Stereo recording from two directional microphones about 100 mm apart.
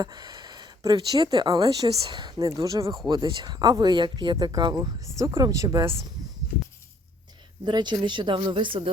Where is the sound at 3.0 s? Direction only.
45° right (ahead or behind).